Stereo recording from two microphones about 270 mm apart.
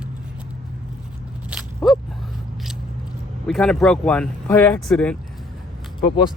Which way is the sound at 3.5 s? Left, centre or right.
Centre.